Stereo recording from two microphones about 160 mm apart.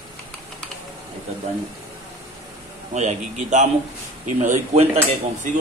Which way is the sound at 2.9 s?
50° right (ahead or behind).